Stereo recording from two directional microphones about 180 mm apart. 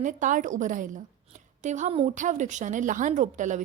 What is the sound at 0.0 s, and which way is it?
A woman's voice, 45° right (ahead or behind).